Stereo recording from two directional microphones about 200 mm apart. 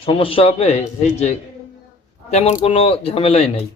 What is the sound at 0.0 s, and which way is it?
A man's voice, 25° left (ahead or behind).